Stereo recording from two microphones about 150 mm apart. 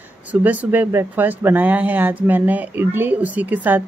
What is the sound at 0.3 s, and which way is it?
Speech, 10° right (ahead or behind).